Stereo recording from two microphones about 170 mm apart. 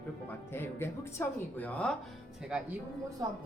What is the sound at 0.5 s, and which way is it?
Speech, 15° left (ahead or behind).